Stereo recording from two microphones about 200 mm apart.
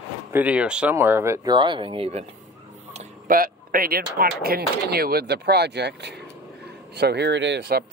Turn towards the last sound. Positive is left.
turn(degrees=-55)  # may be behind; listen again after turning